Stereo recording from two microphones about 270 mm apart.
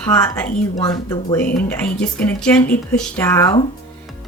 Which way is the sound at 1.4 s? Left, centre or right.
Left.